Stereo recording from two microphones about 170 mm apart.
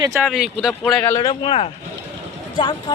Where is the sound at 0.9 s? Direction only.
10° left (ahead or behind).